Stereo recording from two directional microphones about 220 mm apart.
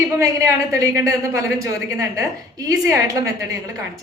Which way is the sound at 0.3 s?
15° right (ahead or behind).